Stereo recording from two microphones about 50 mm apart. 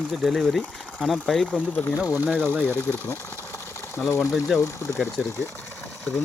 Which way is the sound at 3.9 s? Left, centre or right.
Left.